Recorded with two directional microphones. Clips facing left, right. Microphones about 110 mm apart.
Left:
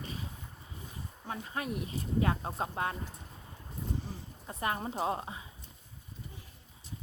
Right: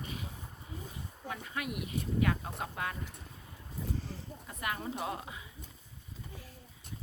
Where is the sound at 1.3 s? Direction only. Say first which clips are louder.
Left 2 dB; 35° left (ahead or behind).